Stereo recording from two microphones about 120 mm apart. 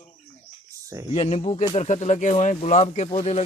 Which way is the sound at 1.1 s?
60° left (ahead or behind).